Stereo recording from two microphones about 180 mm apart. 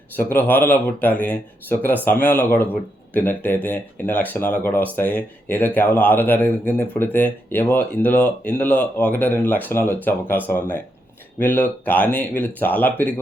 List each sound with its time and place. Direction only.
0.2 s speech: 10° left (ahead or behind)